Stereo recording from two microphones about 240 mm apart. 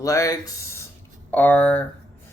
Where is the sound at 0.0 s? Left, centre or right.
Centre.